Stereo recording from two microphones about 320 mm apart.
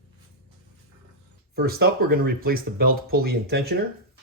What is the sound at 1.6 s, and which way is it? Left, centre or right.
Speech, right.